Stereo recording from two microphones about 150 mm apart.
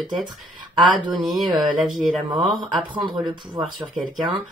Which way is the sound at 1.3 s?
Centre (ahead or behind).